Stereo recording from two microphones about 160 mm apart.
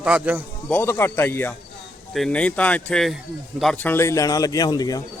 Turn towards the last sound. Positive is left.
turn(degrees=25)  # may be behind; listen again after turning